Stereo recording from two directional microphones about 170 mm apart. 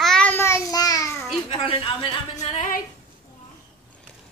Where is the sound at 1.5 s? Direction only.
30° left (ahead or behind).